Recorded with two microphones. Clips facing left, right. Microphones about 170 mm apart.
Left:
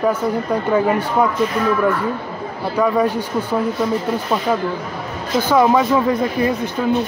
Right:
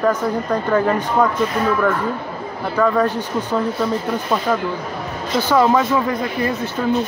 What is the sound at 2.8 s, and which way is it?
Speech, 10° left (ahead or behind).